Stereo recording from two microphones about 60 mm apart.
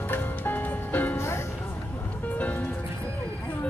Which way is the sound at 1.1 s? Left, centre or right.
Left.